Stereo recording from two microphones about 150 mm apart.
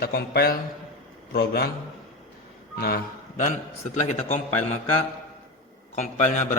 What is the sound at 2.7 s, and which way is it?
Speech, 90° left.